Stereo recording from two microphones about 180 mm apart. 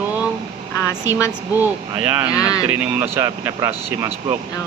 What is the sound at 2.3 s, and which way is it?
Speech, 20° left (ahead or behind).